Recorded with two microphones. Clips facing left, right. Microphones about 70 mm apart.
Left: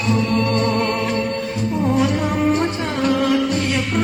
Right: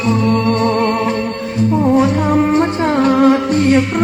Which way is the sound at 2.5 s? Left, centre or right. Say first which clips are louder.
Right 5 dB; right.